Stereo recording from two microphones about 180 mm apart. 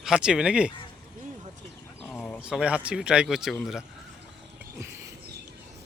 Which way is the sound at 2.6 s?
5° right (ahead or behind).